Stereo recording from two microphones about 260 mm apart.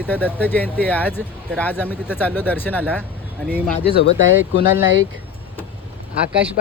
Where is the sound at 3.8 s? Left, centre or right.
Left.